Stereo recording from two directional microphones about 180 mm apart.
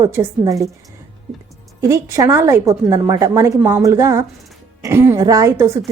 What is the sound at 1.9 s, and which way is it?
A woman's voice, 15° right (ahead or behind).